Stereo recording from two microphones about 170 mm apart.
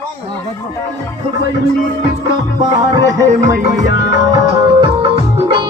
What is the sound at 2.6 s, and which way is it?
Music, 20° right (ahead or behind).